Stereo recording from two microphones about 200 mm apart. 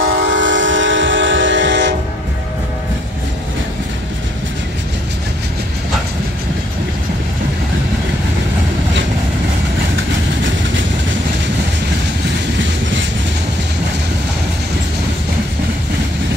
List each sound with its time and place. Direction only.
0.0 s train: 75° right (ahead or behind)